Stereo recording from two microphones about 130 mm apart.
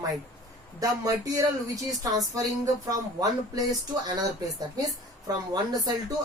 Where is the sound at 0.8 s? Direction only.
25° right (ahead or behind).